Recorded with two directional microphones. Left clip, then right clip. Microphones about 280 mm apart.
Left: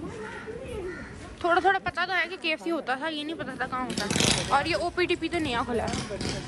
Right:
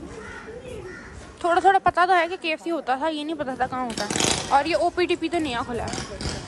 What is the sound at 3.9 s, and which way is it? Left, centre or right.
Speech, right.